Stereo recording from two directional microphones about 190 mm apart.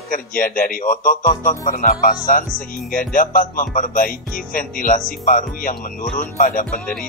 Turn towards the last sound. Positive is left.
turn(degrees=45)  # may be behind; listen again after turning